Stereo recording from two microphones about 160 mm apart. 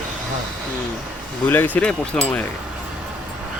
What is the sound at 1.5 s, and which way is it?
Speech, 10° left (ahead or behind).